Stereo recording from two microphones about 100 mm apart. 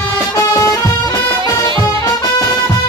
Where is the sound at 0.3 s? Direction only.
35° left (ahead or behind).